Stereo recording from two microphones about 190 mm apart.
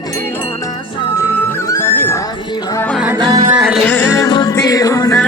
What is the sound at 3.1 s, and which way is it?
Music, 20° right (ahead or behind).